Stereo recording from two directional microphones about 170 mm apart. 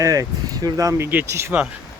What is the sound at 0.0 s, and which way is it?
Speech, 20° right (ahead or behind).